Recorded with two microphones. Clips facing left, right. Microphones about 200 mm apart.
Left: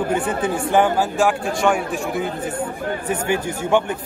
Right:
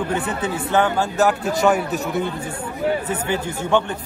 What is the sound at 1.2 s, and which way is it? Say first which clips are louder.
A man's voice: right 1 dB; 5° right (ahead or behind).